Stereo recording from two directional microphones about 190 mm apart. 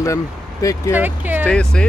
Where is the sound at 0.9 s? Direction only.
10° right (ahead or behind).